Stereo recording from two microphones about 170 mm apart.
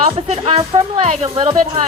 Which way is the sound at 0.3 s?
35° right (ahead or behind).